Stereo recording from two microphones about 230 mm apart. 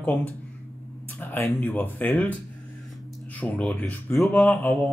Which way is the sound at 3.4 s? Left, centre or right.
Centre.